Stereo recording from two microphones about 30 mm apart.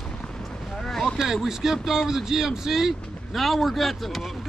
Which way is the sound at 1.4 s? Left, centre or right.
Centre.